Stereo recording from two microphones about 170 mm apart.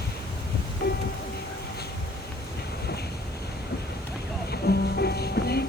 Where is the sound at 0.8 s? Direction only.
60° left (ahead or behind).